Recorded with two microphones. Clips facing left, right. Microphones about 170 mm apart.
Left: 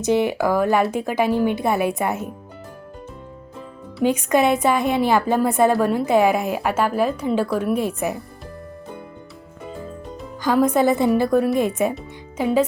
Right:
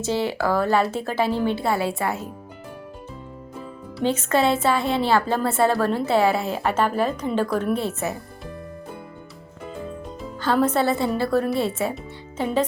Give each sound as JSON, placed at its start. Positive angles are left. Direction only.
{"t": 0.0, "sound": "speech", "side_deg": 15}
{"t": 4.0, "sound": "speech", "side_deg": 15}
{"t": 10.4, "sound": "speech", "side_deg": 10}